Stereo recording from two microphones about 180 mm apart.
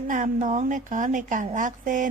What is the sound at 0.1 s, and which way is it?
A woman's voice, 45° right (ahead or behind).